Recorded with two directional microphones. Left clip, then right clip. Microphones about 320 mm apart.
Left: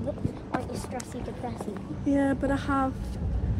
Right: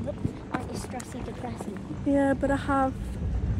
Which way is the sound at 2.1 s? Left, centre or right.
Centre.